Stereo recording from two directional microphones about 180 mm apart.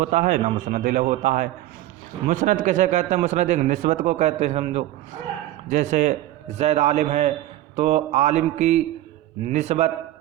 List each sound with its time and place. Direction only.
0.0 s a man's voice: 45° right (ahead or behind)